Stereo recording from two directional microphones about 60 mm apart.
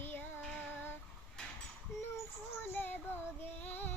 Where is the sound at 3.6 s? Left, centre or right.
Left.